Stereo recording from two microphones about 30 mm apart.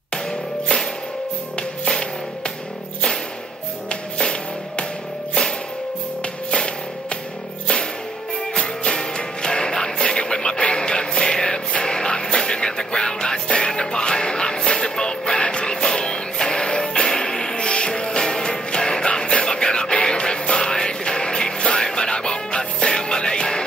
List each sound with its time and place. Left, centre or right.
0.1 s music: left
6.5 s music: left
8.5 s music: left
17.6 s music: left